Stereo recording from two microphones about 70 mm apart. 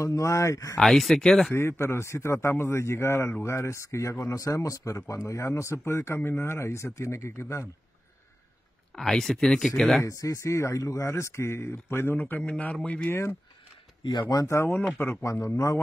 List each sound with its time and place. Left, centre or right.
0.0 s speech: left
0.7 s speech: centre
1.5 s speech: left
8.9 s speech: centre
10.0 s speech: left; by 13.1 s centre
14.5 s speech: left
15.4 s speech: left